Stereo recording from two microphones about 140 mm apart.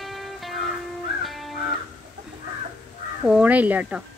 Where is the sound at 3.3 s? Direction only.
10° right (ahead or behind).